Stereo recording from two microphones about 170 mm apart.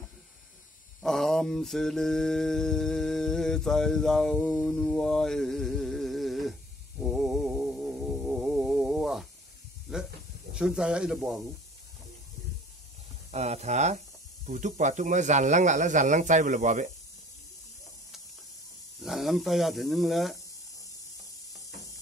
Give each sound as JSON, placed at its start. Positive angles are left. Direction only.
{"t": 1.0, "sound": "mantra", "side_deg": 0}
{"t": 7.0, "sound": "music", "side_deg": 0}
{"t": 9.9, "sound": "hiss", "side_deg": -5}
{"t": 10.5, "sound": "speech", "side_deg": -5}
{"t": 13.3, "sound": "speech", "side_deg": -40}
{"t": 18.9, "sound": "speech", "side_deg": 0}